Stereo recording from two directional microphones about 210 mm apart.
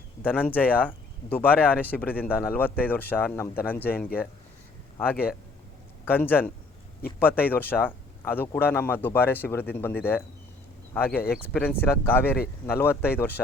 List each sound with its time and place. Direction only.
0.2 s speech: 10° left (ahead or behind)
6.1 s speech: 10° left (ahead or behind)
12.2 s speech: 50° left (ahead or behind)
12.6 s speech: 10° left (ahead or behind)